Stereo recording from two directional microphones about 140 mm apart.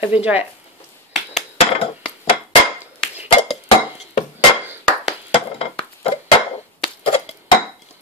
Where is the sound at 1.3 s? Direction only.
45° left (ahead or behind).